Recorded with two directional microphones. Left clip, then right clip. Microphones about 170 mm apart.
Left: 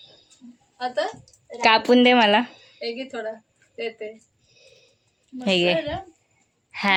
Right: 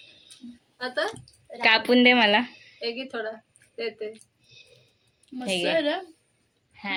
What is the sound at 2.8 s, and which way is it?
Speech, centre (ahead or behind).